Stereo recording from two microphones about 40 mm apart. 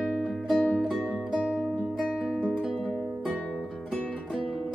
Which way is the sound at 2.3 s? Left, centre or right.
Left.